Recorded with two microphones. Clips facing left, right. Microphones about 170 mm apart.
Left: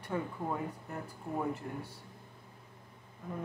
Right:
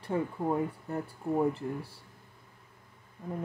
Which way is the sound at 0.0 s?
30° right (ahead or behind).